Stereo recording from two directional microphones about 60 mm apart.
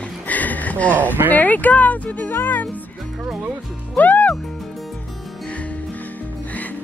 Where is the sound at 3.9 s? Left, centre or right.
Left.